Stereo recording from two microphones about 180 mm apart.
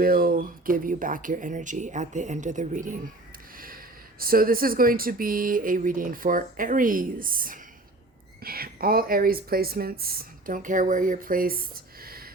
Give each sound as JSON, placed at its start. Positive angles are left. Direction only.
{"t": 0.0, "sound": "speech", "side_deg": -55}
{"t": 4.2, "sound": "speech", "side_deg": -55}